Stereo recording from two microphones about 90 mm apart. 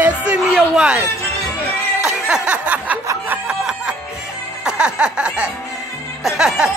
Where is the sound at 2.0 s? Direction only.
5° right (ahead or behind).